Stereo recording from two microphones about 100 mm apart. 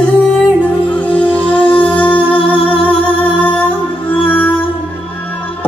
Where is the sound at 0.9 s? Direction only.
15° left (ahead or behind).